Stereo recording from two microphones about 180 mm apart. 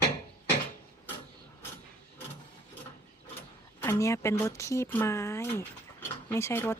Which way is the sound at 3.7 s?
15° left (ahead or behind).